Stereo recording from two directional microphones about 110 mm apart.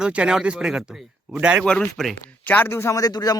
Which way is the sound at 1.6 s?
10° left (ahead or behind).